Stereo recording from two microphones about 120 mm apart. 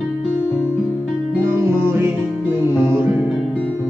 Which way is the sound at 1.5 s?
20° right (ahead or behind).